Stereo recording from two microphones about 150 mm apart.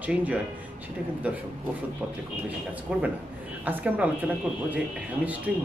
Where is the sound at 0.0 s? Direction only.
10° right (ahead or behind).